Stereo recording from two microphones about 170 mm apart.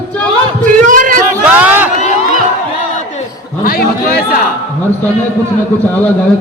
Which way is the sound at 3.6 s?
65° left (ahead or behind).